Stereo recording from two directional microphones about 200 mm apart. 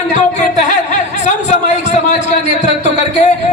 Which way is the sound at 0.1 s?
40° left (ahead or behind).